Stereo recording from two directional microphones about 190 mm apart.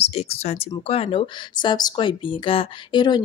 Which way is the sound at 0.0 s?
35° left (ahead or behind).